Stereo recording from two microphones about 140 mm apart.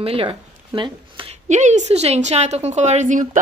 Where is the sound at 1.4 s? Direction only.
60° right (ahead or behind).